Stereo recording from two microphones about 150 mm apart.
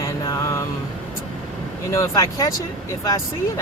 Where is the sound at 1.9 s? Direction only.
20° left (ahead or behind).